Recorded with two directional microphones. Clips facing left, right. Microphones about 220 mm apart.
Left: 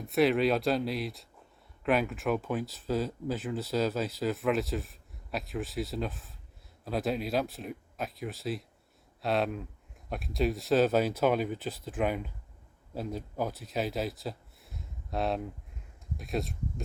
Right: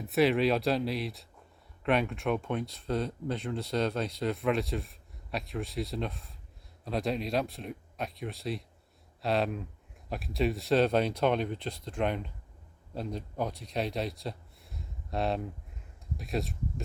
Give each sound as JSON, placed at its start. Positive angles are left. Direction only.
{"t": 0.0, "sound": "speech", "side_deg": 0}